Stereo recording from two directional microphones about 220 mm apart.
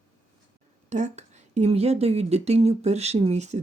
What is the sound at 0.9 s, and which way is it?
A woman's voice, 35° right (ahead or behind).